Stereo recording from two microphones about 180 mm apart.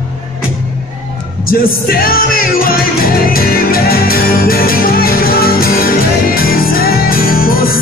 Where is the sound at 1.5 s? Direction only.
55° left (ahead or behind).